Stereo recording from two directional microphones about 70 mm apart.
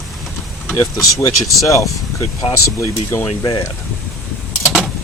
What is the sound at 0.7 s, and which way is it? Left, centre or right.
Speech, left.